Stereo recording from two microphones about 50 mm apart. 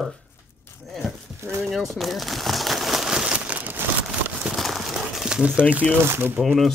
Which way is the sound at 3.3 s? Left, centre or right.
Right.